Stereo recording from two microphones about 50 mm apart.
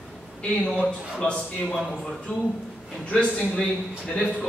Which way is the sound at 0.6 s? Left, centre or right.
Centre.